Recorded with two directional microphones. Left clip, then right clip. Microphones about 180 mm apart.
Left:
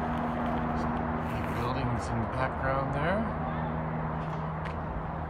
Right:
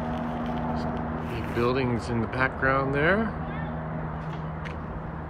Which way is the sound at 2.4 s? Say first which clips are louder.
Right 7 dB; 10° left (ahead or behind).